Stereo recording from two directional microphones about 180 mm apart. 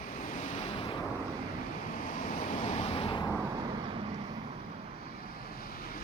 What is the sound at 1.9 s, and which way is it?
Vehicle, 45° left (ahead or behind).